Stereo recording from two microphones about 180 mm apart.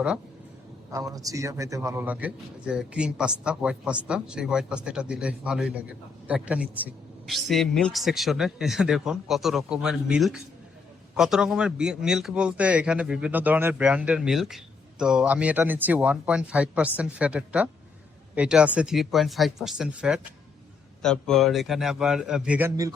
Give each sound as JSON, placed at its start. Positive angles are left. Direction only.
{"t": 0.9, "sound": "speech", "side_deg": -20}